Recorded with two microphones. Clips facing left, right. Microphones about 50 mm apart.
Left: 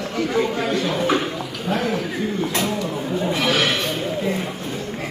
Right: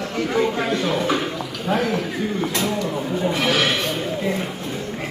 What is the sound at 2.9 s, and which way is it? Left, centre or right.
Chatter, centre.